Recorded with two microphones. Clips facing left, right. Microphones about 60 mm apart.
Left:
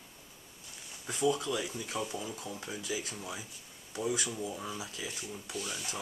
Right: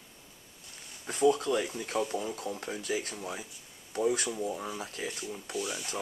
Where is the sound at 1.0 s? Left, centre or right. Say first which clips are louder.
Right 5 dB; right.